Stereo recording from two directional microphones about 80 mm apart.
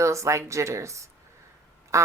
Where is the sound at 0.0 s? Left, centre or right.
Right.